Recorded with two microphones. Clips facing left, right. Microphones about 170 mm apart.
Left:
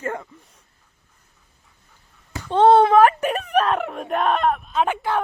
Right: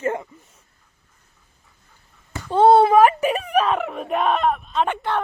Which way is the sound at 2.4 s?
10° right (ahead or behind).